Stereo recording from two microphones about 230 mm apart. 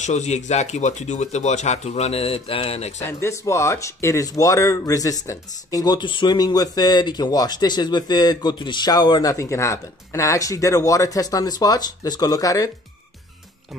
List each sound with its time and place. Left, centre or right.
0.0 s speech: left
3.1 s speech: centre